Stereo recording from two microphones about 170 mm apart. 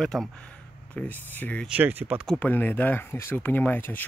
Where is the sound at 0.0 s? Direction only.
5° left (ahead or behind).